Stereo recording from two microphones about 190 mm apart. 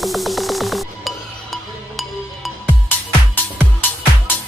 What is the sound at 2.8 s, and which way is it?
Music, 10° left (ahead or behind).